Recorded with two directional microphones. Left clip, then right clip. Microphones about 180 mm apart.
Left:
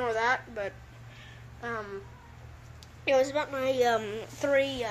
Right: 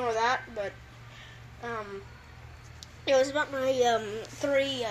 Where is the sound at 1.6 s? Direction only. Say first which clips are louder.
Even; 15° left (ahead or behind).